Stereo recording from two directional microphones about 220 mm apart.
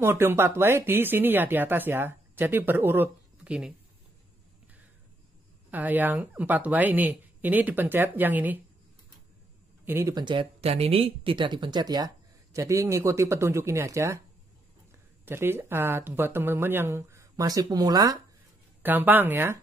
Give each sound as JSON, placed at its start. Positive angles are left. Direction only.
{"t": 0.0, "sound": "speech", "side_deg": -10}
{"t": 5.7, "sound": "speech", "side_deg": -10}
{"t": 9.8, "sound": "speech", "side_deg": -10}
{"t": 15.2, "sound": "speech", "side_deg": -10}